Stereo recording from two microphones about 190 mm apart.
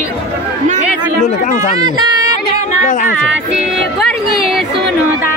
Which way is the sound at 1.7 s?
20° right (ahead or behind).